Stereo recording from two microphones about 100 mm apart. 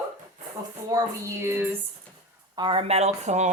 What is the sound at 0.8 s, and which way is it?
Child singing, 35° right (ahead or behind).